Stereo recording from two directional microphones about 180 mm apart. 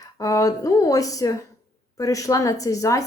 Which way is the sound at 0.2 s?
20° left (ahead or behind).